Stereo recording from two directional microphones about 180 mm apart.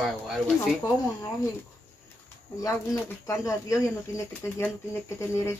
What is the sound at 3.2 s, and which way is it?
Speech, 15° left (ahead or behind).